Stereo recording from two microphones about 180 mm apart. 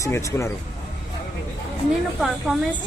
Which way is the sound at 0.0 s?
15° left (ahead or behind).